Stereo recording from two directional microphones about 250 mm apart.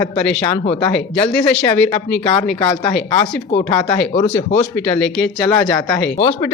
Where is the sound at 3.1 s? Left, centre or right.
Centre.